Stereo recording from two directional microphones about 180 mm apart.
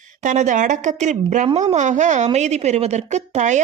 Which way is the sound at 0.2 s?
45° right (ahead or behind).